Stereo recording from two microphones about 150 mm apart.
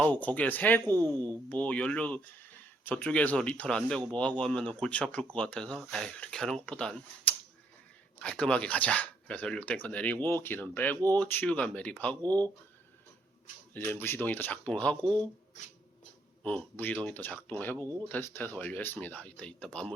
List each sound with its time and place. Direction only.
0.0 s speech: 10° left (ahead or behind)
0.9 s speech: 25° right (ahead or behind)
1.5 s speech: 10° left (ahead or behind)
12.2 s speech: 25° right (ahead or behind)
13.7 s speech: 15° left (ahead or behind)
16.4 s speech: 10° left (ahead or behind)